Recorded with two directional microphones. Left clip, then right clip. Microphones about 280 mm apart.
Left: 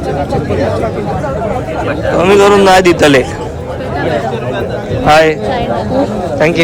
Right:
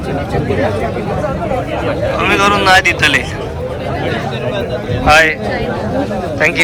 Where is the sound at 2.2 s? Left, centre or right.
Centre.